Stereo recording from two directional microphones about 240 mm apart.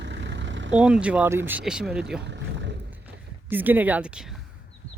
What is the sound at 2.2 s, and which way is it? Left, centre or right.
Boat, right.